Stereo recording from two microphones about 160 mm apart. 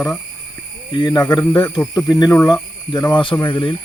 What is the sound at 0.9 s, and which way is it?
Speech, 25° left (ahead or behind).